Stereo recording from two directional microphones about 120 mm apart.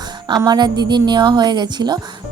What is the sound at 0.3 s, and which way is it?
A woman's voice, 35° right (ahead or behind).